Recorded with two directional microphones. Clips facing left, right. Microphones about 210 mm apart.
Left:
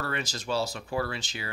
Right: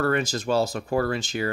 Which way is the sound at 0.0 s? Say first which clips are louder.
Right 10 dB; 50° right (ahead or behind).